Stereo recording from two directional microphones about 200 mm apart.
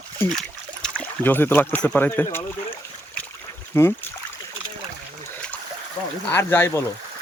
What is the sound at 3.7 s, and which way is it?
Speech, 10° left (ahead or behind).